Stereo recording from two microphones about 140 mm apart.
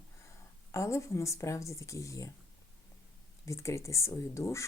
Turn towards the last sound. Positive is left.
turn(degrees=20)  # may be behind; listen again after turning